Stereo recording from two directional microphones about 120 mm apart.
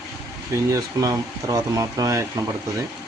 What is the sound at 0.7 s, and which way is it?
Speech, 30° right (ahead or behind).